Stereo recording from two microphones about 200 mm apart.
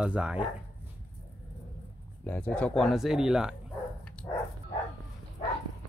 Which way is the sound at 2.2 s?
10° left (ahead or behind).